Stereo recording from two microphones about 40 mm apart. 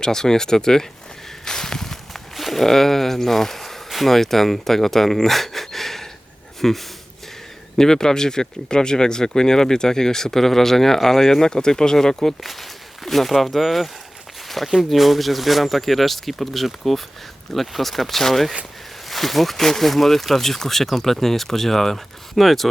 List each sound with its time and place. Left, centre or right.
0.0 s speech: centre
1.5 s walk: centre
6.6 s speech: centre
12.4 s speech: centre
14.4 s a sound: centre
14.8 s speech: centre